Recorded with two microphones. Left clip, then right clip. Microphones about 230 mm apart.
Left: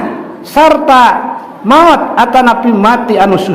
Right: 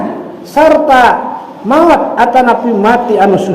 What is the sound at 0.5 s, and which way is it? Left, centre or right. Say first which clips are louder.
A man's voice: left 1 dB; left.